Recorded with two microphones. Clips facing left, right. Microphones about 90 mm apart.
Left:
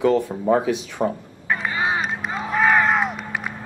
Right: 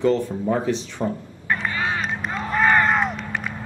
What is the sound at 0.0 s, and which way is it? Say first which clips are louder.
Speech: left 1 dB; 15° left (ahead or behind).